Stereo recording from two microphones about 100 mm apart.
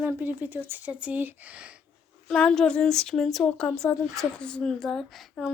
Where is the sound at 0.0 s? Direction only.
20° right (ahead or behind).